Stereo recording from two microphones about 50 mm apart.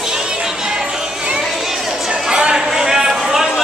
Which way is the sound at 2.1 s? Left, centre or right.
Centre.